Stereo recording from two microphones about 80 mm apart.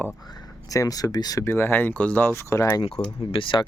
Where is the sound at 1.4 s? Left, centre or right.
Left.